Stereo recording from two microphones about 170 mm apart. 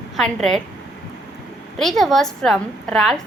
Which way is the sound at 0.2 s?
5° left (ahead or behind).